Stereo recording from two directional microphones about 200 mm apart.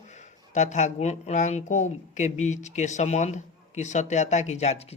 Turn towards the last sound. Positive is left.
turn(degrees=30)  # may be behind; listen again after turning